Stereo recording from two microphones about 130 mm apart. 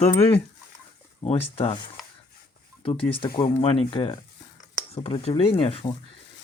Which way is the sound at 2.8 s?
40° left (ahead or behind).